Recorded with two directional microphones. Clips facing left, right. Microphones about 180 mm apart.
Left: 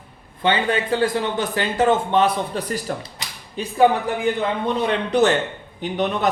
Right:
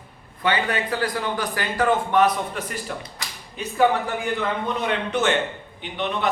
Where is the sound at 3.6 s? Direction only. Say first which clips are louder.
Left 3 dB; 30° left (ahead or behind).